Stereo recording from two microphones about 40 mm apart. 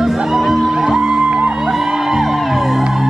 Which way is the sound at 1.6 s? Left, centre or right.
Centre.